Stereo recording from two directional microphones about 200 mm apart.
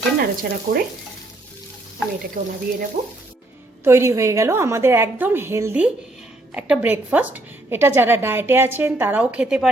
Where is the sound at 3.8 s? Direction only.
15° right (ahead or behind).